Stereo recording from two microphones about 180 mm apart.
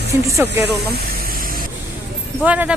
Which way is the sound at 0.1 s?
15° right (ahead or behind).